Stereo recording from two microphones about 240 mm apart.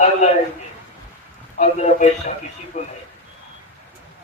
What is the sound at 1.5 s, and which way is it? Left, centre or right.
A man's voice, left.